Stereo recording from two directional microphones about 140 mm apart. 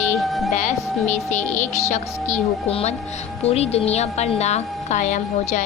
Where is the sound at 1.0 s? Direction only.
60° left (ahead or behind).